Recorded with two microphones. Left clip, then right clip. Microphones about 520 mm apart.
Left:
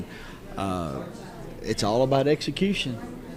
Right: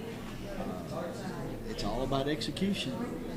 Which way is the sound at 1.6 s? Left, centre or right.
Left.